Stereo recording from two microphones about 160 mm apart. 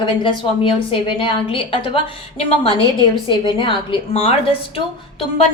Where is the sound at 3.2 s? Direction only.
30° left (ahead or behind).